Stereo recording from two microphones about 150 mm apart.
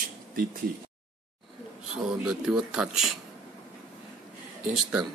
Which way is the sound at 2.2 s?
5° right (ahead or behind).